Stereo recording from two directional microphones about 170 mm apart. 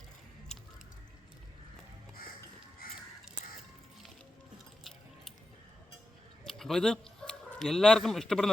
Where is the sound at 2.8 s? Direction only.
60° left (ahead or behind).